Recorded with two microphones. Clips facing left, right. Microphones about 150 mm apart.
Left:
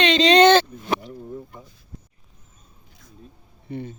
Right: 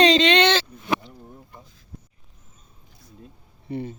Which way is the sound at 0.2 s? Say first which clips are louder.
Left 5 dB; 40° left (ahead or behind).